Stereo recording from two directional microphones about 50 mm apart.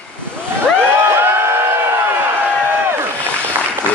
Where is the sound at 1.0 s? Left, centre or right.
Right.